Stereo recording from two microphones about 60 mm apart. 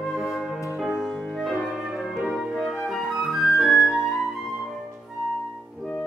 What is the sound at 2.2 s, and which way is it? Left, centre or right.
Music, centre.